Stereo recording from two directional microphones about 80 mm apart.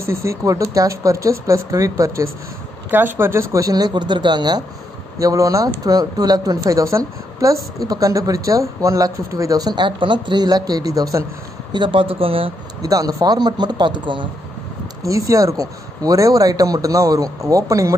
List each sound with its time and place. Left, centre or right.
0.0 s speech: right
2.9 s speech: right
3.6 s speech: right
5.2 s speech: right
9.8 s speech: right
11.7 s speech: right
12.8 s speech: right
15.0 s speech: right